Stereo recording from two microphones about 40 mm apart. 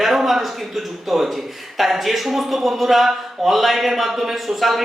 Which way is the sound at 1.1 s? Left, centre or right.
Centre.